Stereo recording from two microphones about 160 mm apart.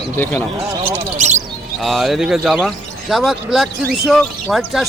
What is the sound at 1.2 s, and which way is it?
Speech, 45° right (ahead or behind).